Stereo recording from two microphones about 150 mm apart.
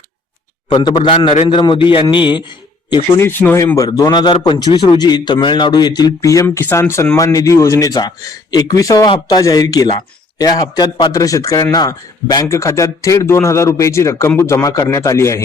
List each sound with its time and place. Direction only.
0.7 s a man's voice: 30° left (ahead or behind)
3.2 s speech: 15° left (ahead or behind)